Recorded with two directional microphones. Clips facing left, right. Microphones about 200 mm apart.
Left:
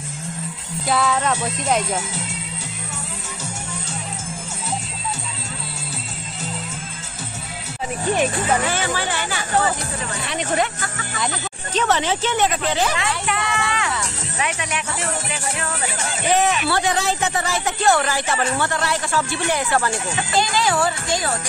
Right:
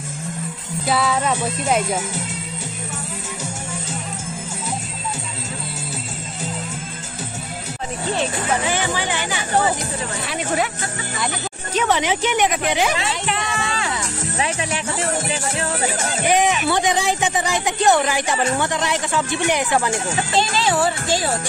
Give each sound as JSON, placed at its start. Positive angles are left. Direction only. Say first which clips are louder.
{"t": 0.8, "sound": "music", "louder": "even", "side_deg": 0}
{"t": 8.6, "sound": "speech", "louder": "right 1 dB", "side_deg": -15}
{"t": 10.2, "sound": "music", "louder": "left 1 dB", "side_deg": -5}
{"t": 11.1, "sound": "speech", "louder": "left 1 dB", "side_deg": -10}
{"t": 13.0, "sound": "speech", "louder": "even", "side_deg": -25}
{"t": 16.3, "sound": "speech", "louder": "right 1 dB", "side_deg": -15}
{"t": 20.1, "sound": "speech", "louder": "right 1 dB", "side_deg": -30}